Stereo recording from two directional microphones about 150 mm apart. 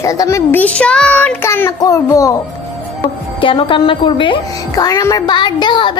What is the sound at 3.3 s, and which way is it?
A woman's voice, 35° left (ahead or behind).